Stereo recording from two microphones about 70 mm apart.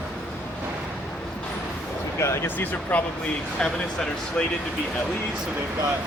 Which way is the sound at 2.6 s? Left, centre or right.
Left.